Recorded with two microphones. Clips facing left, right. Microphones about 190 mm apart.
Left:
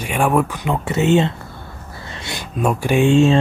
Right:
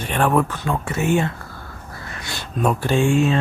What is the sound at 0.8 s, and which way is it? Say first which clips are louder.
Speech: left 5 dB; 25° left (ahead or behind).